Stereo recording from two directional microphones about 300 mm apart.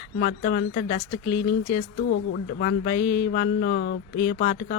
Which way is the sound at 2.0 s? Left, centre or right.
Left.